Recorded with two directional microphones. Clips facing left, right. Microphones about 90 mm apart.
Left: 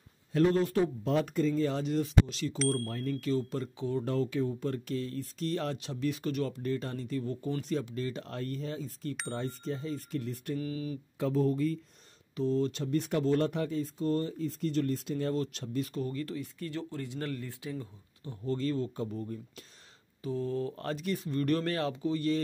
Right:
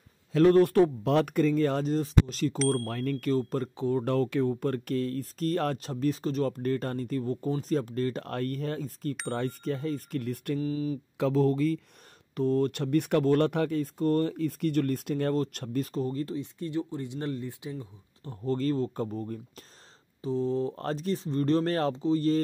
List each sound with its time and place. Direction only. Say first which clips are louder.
0.4 s speech: right 6 dB; 60° right (ahead or behind)
1.9 s speech: right 2 dB; 40° right (ahead or behind)
2.7 s speech: right 4 dB; 70° right (ahead or behind); by 4.0 s 45° right (ahead or behind)
4.0 s speech: right 3 dB; 60° right (ahead or behind)
9.3 s speech: right 5 dB; 65° right (ahead or behind)
10.6 s speech: right 6 dB; 30° right (ahead or behind)
11.1 s speech: right 4 dB; 90° right
12.4 s speech: right 4 dB; 55° right (ahead or behind)
15.3 s speech: right 4 dB; 45° right (ahead or behind)
15.9 s speech: right 4 dB; 35° right (ahead or behind)
16.3 s speech: right 4 dB; 25° right (ahead or behind)
18.2 s speech: right 4 dB; 35° right (ahead or behind)
20.2 s speech: right 5 dB; 25° right (ahead or behind)
21.7 s speech: right 5 dB; 40° right (ahead or behind)